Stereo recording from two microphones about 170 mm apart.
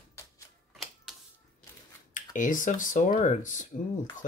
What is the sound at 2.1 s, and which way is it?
Speech, 50° left (ahead or behind).